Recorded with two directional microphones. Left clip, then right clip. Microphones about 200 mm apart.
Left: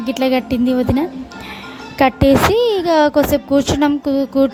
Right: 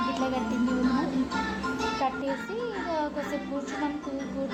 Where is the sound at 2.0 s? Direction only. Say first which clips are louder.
Left 17 dB; 55° left (ahead or behind).